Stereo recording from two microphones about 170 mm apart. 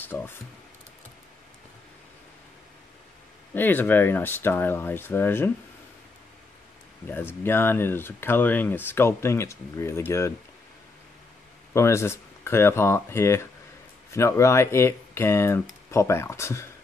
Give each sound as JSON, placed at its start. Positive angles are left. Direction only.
{"t": 0.0, "sound": "speech", "side_deg": 10}
{"t": 3.5, "sound": "speech", "side_deg": 10}
{"t": 7.1, "sound": "speech", "side_deg": 15}
{"t": 11.7, "sound": "speech", "side_deg": 15}